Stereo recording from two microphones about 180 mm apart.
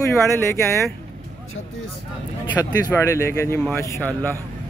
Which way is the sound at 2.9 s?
15° left (ahead or behind).